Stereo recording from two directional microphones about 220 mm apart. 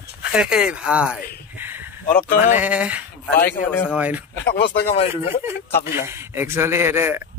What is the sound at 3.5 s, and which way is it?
Speech, 10° left (ahead or behind).